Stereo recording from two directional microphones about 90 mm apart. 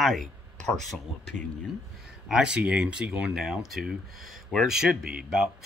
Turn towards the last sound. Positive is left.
turn(degrees=-10)  # may be behind; listen again after turning